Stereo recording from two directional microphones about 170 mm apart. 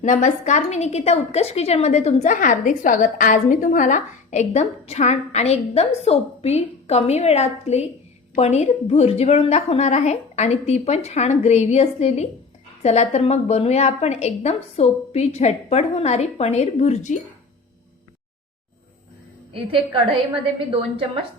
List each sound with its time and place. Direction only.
0.0 s a woman's voice: 50° left (ahead or behind)
19.5 s a woman's voice: 30° right (ahead or behind)